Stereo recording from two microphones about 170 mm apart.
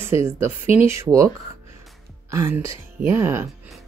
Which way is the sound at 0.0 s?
15° right (ahead or behind).